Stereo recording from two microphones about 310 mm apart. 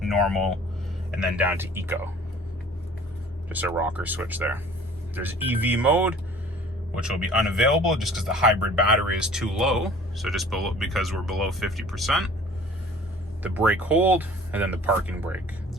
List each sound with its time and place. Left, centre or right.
0.0 s speech: centre
3.5 s speech: centre
13.4 s speech: centre